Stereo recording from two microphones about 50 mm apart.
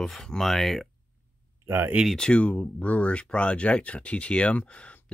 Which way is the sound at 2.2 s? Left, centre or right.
Left.